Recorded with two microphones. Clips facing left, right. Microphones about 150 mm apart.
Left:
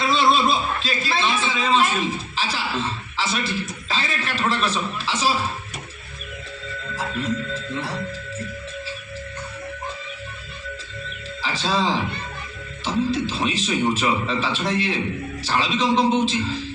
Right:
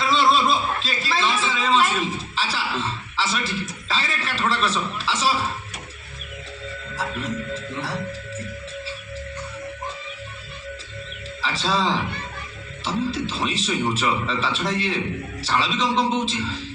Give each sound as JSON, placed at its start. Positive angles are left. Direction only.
{"t": 0.0, "sound": "a sound", "side_deg": 0}
{"t": 3.8, "sound": "a man's voice", "side_deg": 0}
{"t": 11.4, "sound": "a man's voice", "side_deg": 0}